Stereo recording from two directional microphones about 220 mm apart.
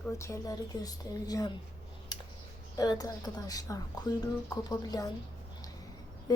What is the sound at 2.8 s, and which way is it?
A woman's voice, 15° left (ahead or behind).